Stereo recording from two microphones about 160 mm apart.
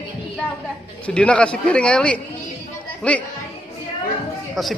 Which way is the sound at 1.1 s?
5° left (ahead or behind).